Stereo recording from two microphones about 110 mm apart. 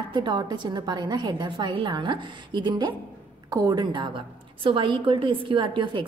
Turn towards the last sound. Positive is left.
turn(degrees=-45)  # may be behind; listen again after turning